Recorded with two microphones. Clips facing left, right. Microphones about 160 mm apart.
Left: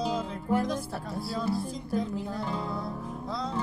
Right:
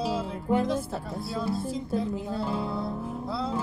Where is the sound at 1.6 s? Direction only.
25° right (ahead or behind).